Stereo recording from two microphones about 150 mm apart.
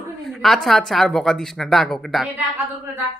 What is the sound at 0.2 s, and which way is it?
Speech, centre (ahead or behind).